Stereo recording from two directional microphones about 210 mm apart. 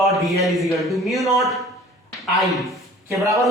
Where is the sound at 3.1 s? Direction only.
15° right (ahead or behind).